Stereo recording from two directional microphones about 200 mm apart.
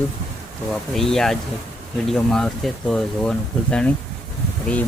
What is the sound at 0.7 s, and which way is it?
Speech, centre (ahead or behind).